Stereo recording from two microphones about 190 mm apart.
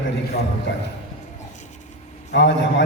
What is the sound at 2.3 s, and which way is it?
Speech, 65° left (ahead or behind).